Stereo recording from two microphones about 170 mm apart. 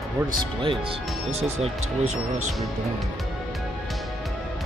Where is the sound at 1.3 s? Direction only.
40° right (ahead or behind).